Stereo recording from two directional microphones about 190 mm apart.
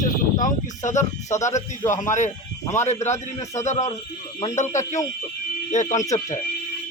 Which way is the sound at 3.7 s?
40° left (ahead or behind).